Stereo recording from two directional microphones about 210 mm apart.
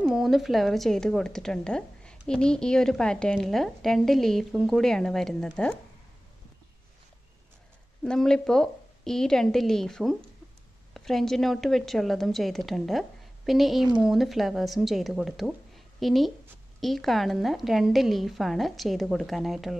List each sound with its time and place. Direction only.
0.0 s a woman's voice: centre (ahead or behind)
8.0 s a woman's voice: 5° left (ahead or behind)